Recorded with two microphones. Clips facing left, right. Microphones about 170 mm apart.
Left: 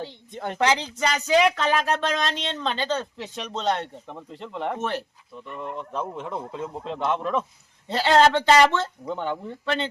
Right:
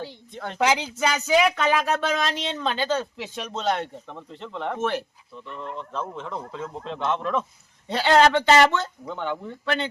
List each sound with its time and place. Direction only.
0.0 s speech: 15° left (ahead or behind)
0.6 s speech: 10° right (ahead or behind)
4.0 s speech: 10° left (ahead or behind)
5.5 s speech: 10° left (ahead or behind)
8.8 s speech: 35° left (ahead or behind)